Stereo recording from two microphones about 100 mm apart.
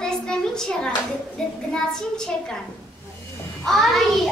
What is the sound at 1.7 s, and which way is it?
Speech, 5° left (ahead or behind).